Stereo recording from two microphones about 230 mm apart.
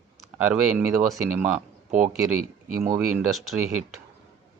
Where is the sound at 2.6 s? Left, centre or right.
Right.